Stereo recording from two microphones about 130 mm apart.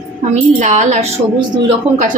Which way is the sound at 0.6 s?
70° right (ahead or behind).